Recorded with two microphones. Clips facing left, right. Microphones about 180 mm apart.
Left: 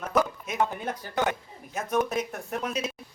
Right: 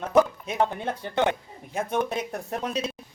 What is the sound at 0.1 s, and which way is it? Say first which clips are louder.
Music: right 6 dB; 30° right (ahead or behind).